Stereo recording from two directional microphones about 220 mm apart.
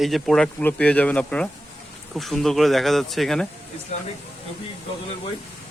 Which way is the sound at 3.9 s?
30° left (ahead or behind).